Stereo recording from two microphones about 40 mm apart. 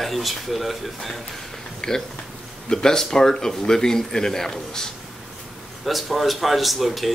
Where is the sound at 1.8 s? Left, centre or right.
Centre.